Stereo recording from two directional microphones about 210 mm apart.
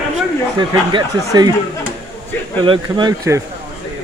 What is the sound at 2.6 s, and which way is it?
Speech, 20° right (ahead or behind).